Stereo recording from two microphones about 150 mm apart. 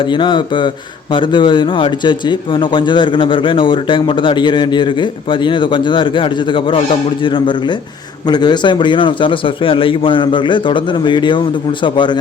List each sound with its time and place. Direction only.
0.0 s a man's voice: 30° left (ahead or behind)